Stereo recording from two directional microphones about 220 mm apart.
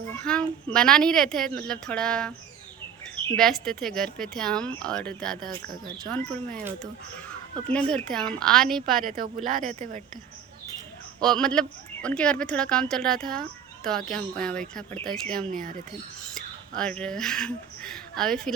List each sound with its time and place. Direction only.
0.2 s speech: 5° left (ahead or behind)
3.3 s speech: centre (ahead or behind)
7.7 s speech: 5° left (ahead or behind)
9.0 s speech: 40° right (ahead or behind)
11.2 s speech: 5° left (ahead or behind)
15.5 s speech: 40° right (ahead or behind)
16.3 s speech: 5° left (ahead or behind)